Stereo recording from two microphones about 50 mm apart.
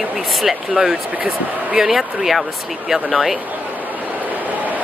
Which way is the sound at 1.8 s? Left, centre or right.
Centre.